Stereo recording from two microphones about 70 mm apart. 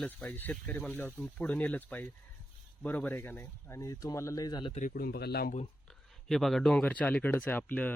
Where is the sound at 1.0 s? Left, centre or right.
Left.